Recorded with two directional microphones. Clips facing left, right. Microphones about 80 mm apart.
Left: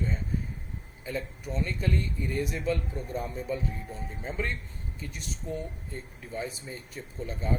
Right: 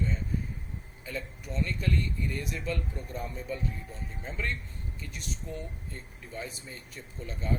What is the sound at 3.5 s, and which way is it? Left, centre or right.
Speech, centre.